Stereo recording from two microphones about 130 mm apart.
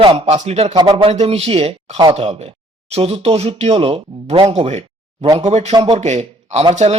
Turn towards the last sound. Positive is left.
turn(degrees=-60)  # may be behind; listen again after turning